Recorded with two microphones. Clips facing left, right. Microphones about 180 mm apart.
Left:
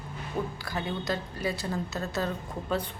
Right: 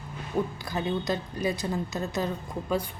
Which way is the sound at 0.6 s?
20° right (ahead or behind).